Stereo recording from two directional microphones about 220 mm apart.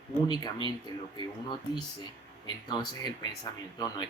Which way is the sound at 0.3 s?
20° left (ahead or behind).